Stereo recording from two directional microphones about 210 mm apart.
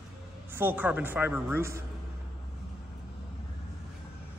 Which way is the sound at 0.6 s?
10° right (ahead or behind).